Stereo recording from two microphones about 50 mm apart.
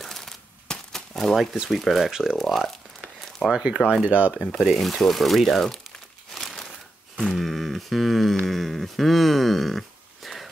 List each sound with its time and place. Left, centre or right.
0.0 s crumpling: centre
1.7 s speech: centre
2.3 s crumpling: centre
4.0 s speech: right
4.5 s crumpling: centre
7.3 s a sound: centre
8.5 s speech: centre